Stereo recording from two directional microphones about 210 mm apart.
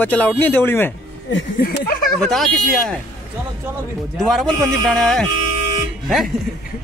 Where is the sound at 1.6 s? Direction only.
45° left (ahead or behind).